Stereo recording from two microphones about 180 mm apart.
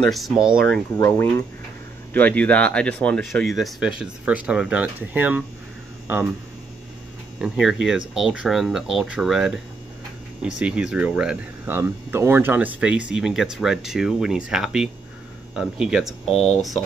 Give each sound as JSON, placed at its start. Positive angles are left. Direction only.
{"t": 0.0, "sound": "speech", "side_deg": 0}
{"t": 0.9, "sound": "speech", "side_deg": 20}
{"t": 2.1, "sound": "speech", "side_deg": 10}
{"t": 7.3, "sound": "speech", "side_deg": 0}
{"t": 16.3, "sound": "speech", "side_deg": 35}